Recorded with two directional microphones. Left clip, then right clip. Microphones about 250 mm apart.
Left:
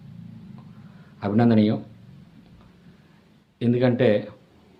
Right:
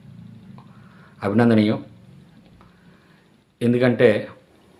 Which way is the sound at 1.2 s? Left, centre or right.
Centre.